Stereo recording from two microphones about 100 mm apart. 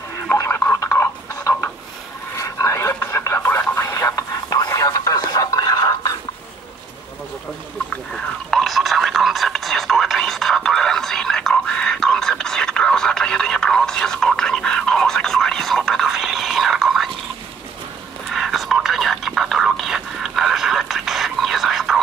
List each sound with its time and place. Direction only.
0.3 s a sound: 30° left (ahead or behind)
2.3 s radio: 30° left (ahead or behind)
7.9 s radio: 5° left (ahead or behind)
18.3 s whispering: centre (ahead or behind)